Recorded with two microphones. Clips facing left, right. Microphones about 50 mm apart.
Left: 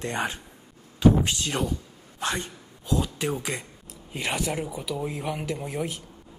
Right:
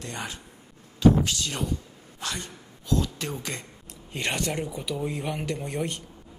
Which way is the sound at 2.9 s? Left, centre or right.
Centre.